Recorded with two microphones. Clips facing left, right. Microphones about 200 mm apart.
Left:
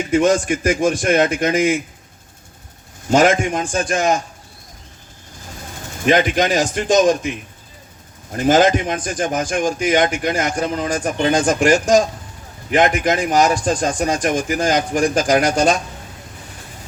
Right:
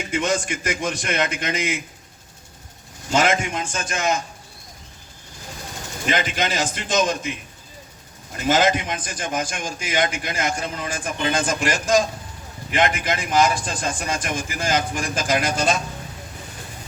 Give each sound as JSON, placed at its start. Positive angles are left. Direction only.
{"t": 0.0, "sound": "a man's voice", "side_deg": 50}
{"t": 3.1, "sound": "a man's voice", "side_deg": 50}
{"t": 6.1, "sound": "a man's voice", "side_deg": 45}
{"t": 8.3, "sound": "a man's voice", "side_deg": 45}